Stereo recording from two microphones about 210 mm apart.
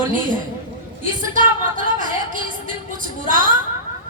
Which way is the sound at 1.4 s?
40° right (ahead or behind).